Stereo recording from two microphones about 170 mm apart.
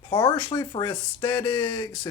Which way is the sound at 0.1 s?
25° left (ahead or behind).